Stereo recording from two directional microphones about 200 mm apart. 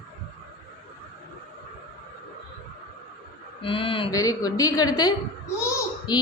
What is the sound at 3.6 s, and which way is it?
A woman's voice, 25° left (ahead or behind).